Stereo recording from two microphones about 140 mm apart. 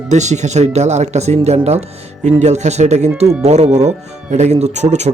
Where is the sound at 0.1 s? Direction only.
55° right (ahead or behind).